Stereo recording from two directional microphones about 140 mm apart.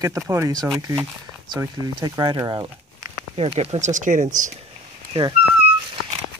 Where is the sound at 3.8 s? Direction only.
65° right (ahead or behind).